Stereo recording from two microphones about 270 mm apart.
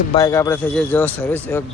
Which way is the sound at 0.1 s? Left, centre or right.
Centre.